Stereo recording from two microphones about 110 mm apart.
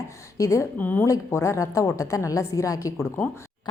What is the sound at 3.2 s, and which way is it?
Speech, 20° left (ahead or behind).